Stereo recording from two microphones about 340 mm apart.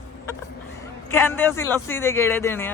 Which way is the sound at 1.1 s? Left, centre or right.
Centre.